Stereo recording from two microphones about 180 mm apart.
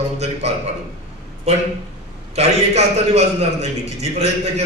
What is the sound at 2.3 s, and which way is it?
A man's voice, 35° right (ahead or behind).